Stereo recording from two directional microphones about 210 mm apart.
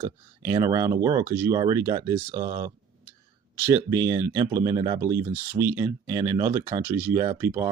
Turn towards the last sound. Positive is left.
turn(degrees=-10)  # may be behind; listen again after turning